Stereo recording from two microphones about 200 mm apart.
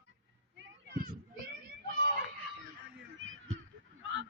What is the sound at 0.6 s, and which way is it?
Children playing, 55° right (ahead or behind).